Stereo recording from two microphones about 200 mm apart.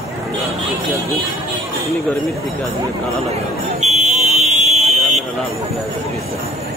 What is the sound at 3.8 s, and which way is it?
Buzzer, 35° right (ahead or behind).